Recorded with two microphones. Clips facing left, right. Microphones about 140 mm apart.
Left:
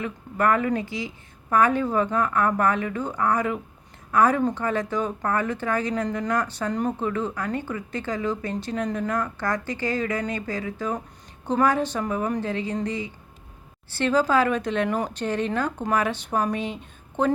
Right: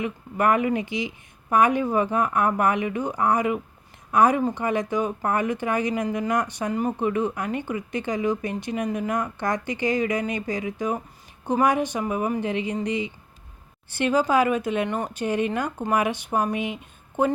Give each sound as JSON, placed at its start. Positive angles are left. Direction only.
{"t": 0.0, "sound": "speech", "side_deg": -15}
{"t": 14.8, "sound": "speech", "side_deg": 0}
{"t": 15.1, "sound": "speech", "side_deg": -10}